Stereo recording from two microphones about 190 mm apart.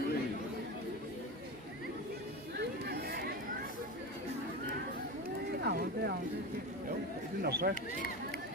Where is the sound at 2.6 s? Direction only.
60° right (ahead or behind).